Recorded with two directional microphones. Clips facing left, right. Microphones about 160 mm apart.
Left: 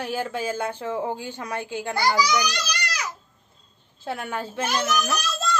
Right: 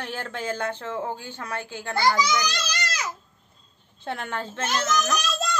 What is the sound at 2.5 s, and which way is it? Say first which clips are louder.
Baby cry: left 1 dB; 25° right (ahead or behind).